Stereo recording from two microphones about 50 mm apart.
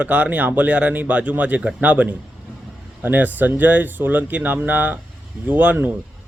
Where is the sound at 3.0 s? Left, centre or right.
Right.